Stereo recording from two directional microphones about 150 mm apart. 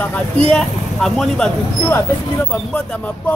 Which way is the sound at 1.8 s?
15° left (ahead or behind).